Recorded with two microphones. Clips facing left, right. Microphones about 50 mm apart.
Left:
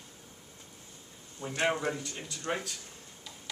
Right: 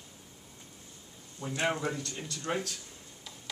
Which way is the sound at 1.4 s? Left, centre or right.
Left.